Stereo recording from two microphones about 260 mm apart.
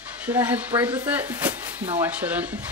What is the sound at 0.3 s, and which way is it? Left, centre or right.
Speech, centre.